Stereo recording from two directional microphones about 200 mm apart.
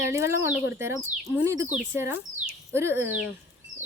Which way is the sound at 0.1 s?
15° right (ahead or behind).